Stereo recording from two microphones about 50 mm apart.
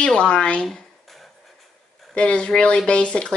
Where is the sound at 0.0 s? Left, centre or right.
Centre.